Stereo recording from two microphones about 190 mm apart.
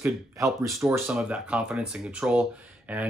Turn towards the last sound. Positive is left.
turn(degrees=-5)  # may be behind; listen again after turning